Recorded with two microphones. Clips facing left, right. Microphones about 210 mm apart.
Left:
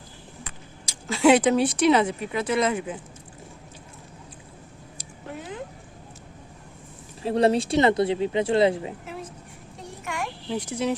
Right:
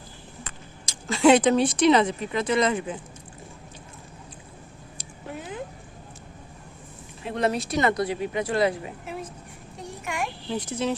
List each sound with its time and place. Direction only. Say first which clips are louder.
0.4 s speech: even; 5° left (ahead or behind)
7.2 s speech: left 5 dB; 35° left (ahead or behind)
10.5 s speech: left 1 dB; 10° left (ahead or behind)